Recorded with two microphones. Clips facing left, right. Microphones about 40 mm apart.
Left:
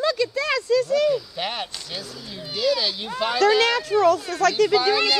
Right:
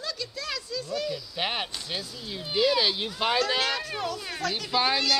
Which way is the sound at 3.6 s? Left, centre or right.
Left.